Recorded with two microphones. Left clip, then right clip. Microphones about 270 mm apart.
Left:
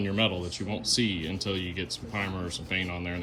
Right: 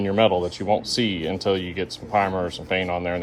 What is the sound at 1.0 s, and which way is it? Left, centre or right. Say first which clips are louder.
Speech: right 6 dB; centre.